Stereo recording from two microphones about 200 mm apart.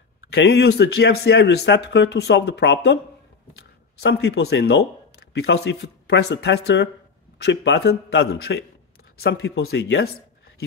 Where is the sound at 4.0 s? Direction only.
55° left (ahead or behind).